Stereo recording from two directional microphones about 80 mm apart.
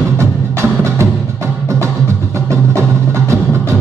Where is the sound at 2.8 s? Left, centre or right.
Right.